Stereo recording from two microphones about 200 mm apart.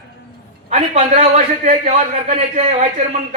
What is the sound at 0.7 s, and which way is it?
A man's voice, 35° right (ahead or behind).